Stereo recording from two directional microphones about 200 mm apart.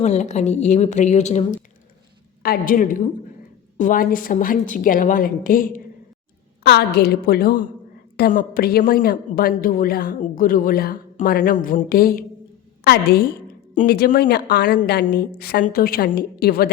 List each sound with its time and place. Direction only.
0.0 s a woman's voice: 35° left (ahead or behind)
2.4 s a woman's voice: 45° left (ahead or behind)
14.8 s a woman's voice: 45° left (ahead or behind)